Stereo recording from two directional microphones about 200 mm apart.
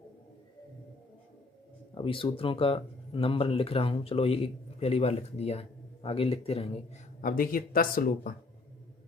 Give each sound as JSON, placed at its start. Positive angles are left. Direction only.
{"t": 2.0, "sound": "speech", "side_deg": 25}
{"t": 7.2, "sound": "speech", "side_deg": 45}